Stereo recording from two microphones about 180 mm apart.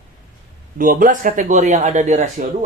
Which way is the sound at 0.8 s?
50° right (ahead or behind).